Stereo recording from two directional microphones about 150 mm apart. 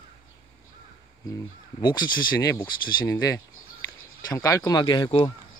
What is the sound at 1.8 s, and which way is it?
Speech, 30° left (ahead or behind).